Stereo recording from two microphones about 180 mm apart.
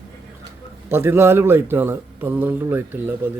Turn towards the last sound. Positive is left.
turn(degrees=-10)  # may be behind; listen again after turning